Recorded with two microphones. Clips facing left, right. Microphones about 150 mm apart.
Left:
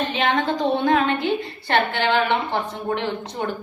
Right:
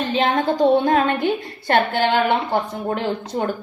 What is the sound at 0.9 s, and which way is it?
A woman's voice, 45° right (ahead or behind).